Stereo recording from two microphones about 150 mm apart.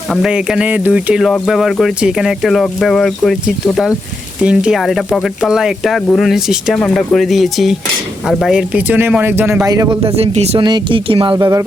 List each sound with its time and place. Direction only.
0.1 s speech: 5° right (ahead or behind)
9.6 s a man's voice: 25° right (ahead or behind)
10.0 s speech: 45° right (ahead or behind)
10.6 s speech: 30° right (ahead or behind)
11.3 s a man's voice: 25° right (ahead or behind)